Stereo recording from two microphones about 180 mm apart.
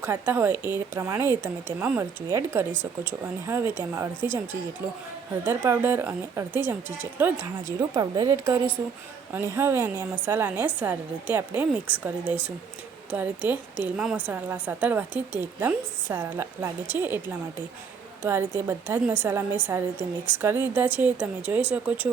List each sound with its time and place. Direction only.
0.0 s a woman's voice: 15° right (ahead or behind)
5.5 s a woman's voice: 10° right (ahead or behind)